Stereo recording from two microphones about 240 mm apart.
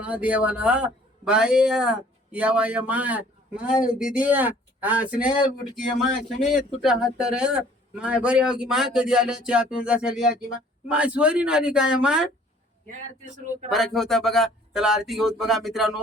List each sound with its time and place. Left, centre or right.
0.0 s a man's voice: centre
6.8 s a man's voice: centre
13.3 s speech: right
13.7 s a man's voice: centre